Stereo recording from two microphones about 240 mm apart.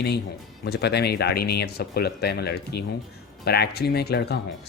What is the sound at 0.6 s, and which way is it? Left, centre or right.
Speech, left.